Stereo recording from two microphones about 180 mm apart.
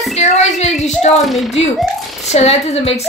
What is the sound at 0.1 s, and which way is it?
A woman's voice, 40° left (ahead or behind).